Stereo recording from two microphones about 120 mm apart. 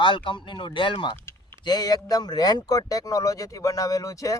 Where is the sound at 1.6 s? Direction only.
35° left (ahead or behind).